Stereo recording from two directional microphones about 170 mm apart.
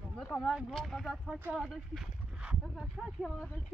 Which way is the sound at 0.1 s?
5° left (ahead or behind).